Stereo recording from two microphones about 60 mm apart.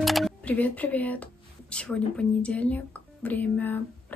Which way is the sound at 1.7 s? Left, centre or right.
Centre.